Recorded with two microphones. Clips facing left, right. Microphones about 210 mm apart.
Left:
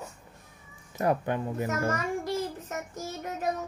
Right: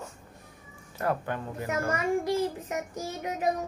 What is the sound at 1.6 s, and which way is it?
A child's voice, 15° right (ahead or behind).